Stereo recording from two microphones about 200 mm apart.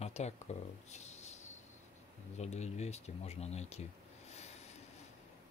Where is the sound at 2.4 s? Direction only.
35° left (ahead or behind).